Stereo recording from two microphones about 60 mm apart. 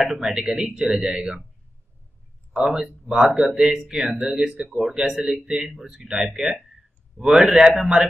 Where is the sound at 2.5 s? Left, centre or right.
Centre.